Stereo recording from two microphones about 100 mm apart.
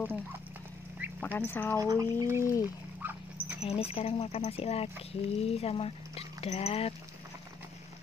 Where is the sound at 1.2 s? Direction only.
20° left (ahead or behind).